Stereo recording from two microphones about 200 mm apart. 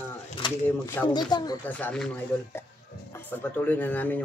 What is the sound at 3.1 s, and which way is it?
Speech, 10° left (ahead or behind).